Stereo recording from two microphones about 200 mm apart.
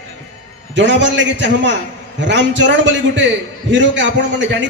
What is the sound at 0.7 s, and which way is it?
A man's voice, 60° right (ahead or behind).